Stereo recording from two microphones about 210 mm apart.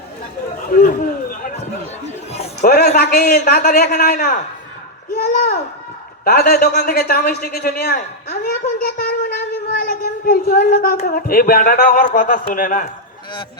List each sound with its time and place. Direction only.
0.7 s a man's voice: 40° left (ahead or behind)
2.3 s a man's voice: 30° left (ahead or behind)
2.6 s a man's voice: 45° left (ahead or behind)
9.7 s child singing: 45° left (ahead or behind)
11.0 s a man's voice: 45° left (ahead or behind)